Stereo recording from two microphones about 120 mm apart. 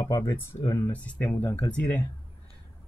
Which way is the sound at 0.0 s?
25° left (ahead or behind).